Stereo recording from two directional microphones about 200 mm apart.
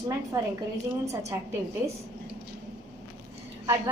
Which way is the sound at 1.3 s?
15° right (ahead or behind).